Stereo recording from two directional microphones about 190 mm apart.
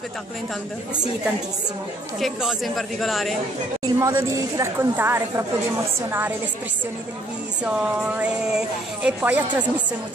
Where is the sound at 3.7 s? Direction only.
15° right (ahead or behind).